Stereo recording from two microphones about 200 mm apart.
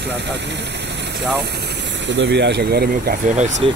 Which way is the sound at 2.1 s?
60° right (ahead or behind).